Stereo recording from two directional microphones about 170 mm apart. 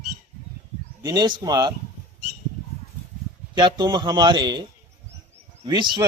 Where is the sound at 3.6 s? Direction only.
25° right (ahead or behind).